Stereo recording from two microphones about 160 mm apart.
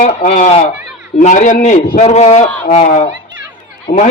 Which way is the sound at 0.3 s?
45° left (ahead or behind).